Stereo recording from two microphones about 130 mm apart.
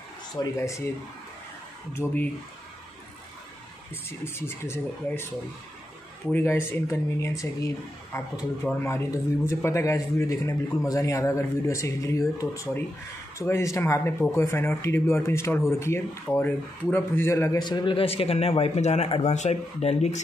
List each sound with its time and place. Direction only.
0.4 s speech: 25° left (ahead or behind)
2.0 s speech: 15° left (ahead or behind)
3.9 s speech: 20° left (ahead or behind)
6.3 s a man's voice: 20° left (ahead or behind); by 20.2 s 55° left (ahead or behind)